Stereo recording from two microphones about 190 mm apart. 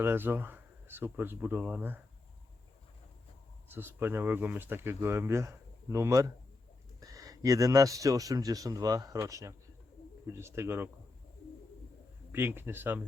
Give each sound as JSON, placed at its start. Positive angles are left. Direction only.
{"t": 0.0, "sound": "speech", "side_deg": -10}
{"t": 3.7, "sound": "speech", "side_deg": -10}
{"t": 12.3, "sound": "speech", "side_deg": -10}